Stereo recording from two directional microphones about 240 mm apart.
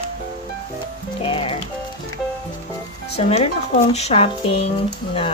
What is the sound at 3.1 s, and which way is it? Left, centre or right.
Speech, left.